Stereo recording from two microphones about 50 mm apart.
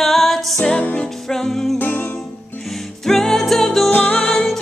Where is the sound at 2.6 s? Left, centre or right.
Centre.